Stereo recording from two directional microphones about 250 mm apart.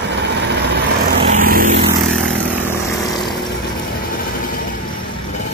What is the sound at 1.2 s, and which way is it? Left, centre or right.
Vehicle, right.